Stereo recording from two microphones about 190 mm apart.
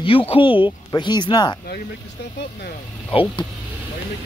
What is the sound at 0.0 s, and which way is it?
Speech, 30° left (ahead or behind).